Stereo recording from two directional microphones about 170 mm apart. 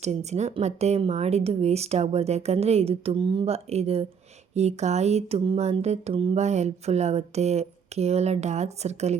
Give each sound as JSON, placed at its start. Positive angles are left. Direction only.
{"t": 0.0, "sound": "speech", "side_deg": -40}